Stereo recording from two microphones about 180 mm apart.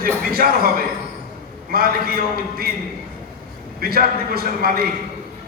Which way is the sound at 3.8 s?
55° right (ahead or behind).